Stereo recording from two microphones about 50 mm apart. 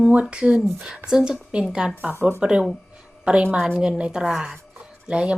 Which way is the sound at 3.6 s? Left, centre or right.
Centre.